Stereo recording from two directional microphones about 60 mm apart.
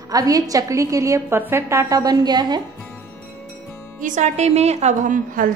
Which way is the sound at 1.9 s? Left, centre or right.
Right.